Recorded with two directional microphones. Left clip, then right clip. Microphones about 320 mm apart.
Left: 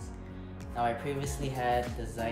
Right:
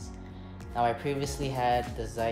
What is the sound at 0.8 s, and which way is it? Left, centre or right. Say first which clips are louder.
Speech: right 3 dB; centre.